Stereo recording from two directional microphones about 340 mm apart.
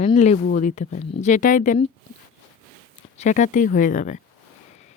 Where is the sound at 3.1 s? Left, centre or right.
Left.